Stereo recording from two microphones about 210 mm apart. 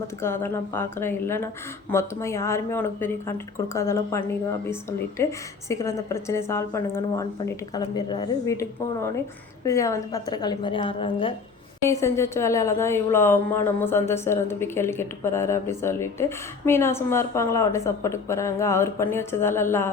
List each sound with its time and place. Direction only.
0.2 s a woman's voice: 10° left (ahead or behind)
11.8 s a woman's voice: 15° left (ahead or behind)